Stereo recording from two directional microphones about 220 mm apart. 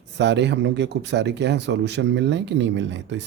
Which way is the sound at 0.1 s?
55° right (ahead or behind).